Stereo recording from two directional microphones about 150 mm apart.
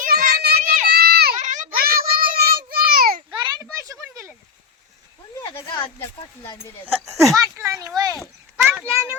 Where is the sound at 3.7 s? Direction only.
20° right (ahead or behind).